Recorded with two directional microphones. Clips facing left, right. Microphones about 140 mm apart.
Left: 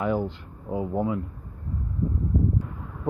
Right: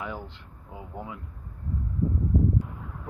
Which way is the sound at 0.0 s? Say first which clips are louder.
Left 11 dB; 50° left (ahead or behind).